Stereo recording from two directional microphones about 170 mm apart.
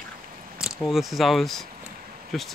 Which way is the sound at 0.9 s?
Centre (ahead or behind).